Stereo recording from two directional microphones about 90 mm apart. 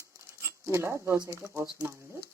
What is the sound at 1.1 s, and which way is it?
Speech, 35° right (ahead or behind).